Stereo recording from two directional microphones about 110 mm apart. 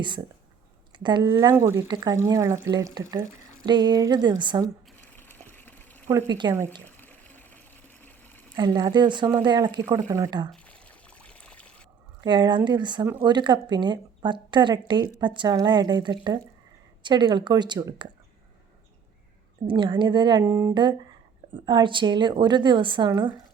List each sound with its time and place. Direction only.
0.9 s a woman's voice: 45° right (ahead or behind)
1.3 s speech: 25° right (ahead or behind)
1.9 s speech: 40° right (ahead or behind)
3.7 s speech: 40° right (ahead or behind)
5.1 s a sound: 20° left (ahead or behind)
6.2 s a woman's voice: 40° right (ahead or behind)
6.8 s water: 15° left (ahead or behind)
8.0 s pour: 15° left (ahead or behind)
8.5 s speech: 40° right (ahead or behind)
10.5 s pour: 10° left (ahead or behind)
12.2 s a woman's voice: 40° right (ahead or behind)
19.6 s a woman's voice: 45° right (ahead or behind)
20.5 s speech: 25° right (ahead or behind)
21.5 s a woman's voice: 45° right (ahead or behind)